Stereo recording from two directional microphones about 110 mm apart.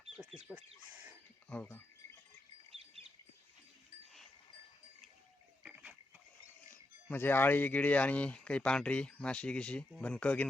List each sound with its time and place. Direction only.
0.0 s bird: 5° right (ahead or behind)
0.5 s speech: 15° right (ahead or behind)
1.5 s speech: 15° left (ahead or behind)
2.6 s bird: 65° right (ahead or behind)
5.6 s a sound: 5° right (ahead or behind)
6.7 s speech: 20° left (ahead or behind)